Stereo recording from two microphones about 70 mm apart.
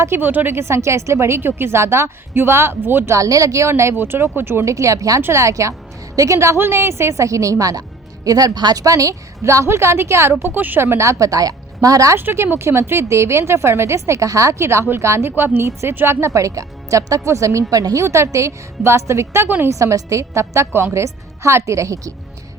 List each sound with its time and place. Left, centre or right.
0.0 s speech: right
3.2 s speech: right
4.6 s a woman's voice: right
8.8 s speech: right
10.4 s a woman's voice: right
12.1 s speech: right
14.6 s a woman's voice: right
18.0 s a woman's voice: right